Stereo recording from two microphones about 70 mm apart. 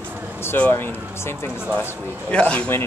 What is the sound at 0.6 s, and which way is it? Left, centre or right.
Speech, left.